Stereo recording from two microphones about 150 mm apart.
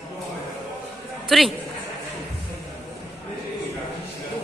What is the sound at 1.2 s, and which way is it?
Speech, centre (ahead or behind).